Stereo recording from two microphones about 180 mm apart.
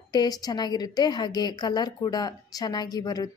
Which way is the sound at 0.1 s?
20° left (ahead or behind).